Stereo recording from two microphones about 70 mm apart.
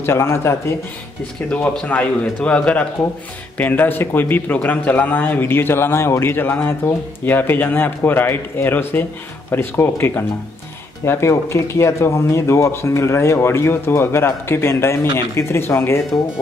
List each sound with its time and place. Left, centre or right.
0.0 s speech: left
1.5 s a man's voice: centre; by 16.0 s left